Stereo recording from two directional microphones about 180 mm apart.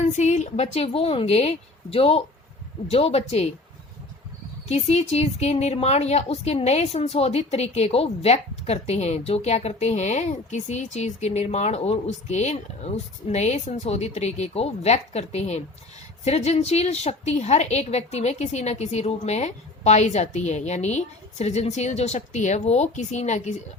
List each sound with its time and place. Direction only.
0.1 s a woman's voice: 40° left (ahead or behind)
4.7 s a woman's voice: 35° left (ahead or behind)